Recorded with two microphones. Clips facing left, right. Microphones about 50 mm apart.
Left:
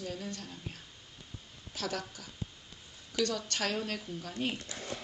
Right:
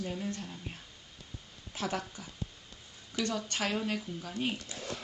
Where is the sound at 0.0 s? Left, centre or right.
Right.